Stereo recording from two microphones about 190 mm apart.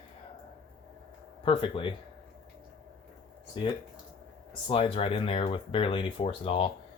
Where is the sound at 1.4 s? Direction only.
25° left (ahead or behind).